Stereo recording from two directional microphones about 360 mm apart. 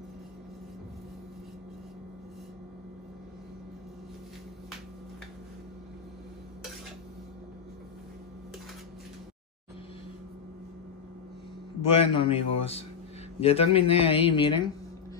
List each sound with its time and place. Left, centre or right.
11.8 s speech: centre